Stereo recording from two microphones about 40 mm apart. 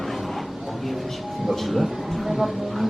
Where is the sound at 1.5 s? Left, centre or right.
Centre.